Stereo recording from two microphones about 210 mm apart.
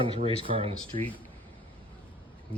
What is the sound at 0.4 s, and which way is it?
Speech, 25° right (ahead or behind).